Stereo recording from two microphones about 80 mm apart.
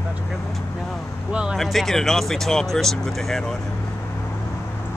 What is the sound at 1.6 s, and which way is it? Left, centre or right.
Speech, centre.